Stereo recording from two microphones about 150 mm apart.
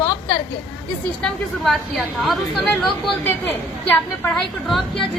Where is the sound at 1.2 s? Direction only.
Centre (ahead or behind).